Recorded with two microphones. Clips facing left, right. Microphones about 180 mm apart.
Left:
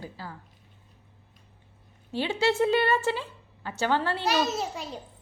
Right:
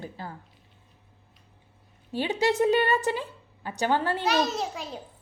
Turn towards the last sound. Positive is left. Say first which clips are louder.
# even
turn(degrees=0)  # may be behind; listen again after turning